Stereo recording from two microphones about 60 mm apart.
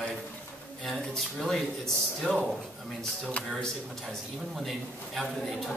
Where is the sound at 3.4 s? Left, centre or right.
Left.